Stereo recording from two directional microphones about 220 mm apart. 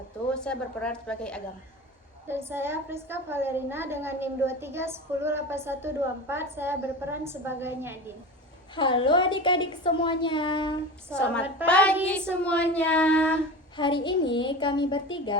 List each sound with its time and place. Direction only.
0.3 s a woman's voice: 5° left (ahead or behind)
2.2 s a woman's voice: 10° right (ahead or behind)
8.7 s a woman's voice: 20° left (ahead or behind)
11.6 s a woman's voice: 5° left (ahead or behind)
13.7 s a woman's voice: 20° left (ahead or behind)